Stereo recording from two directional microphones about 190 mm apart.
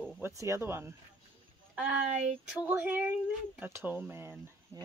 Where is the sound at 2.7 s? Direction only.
10° right (ahead or behind).